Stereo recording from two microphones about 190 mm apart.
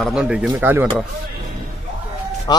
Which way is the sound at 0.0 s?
5° right (ahead or behind).